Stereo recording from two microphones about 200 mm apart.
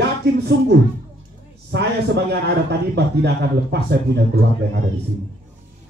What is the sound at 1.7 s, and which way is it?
A man's voice, 55° right (ahead or behind).